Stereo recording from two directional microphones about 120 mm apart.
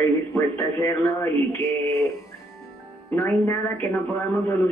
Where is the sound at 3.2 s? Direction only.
25° left (ahead or behind).